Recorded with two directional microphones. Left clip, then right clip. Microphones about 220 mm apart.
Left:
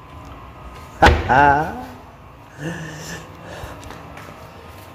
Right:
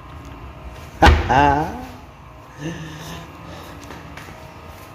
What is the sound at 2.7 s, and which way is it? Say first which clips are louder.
Gasp: left 2 dB; 20° left (ahead or behind).